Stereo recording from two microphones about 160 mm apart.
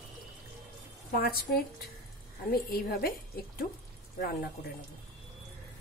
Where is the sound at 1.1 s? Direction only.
70° left (ahead or behind).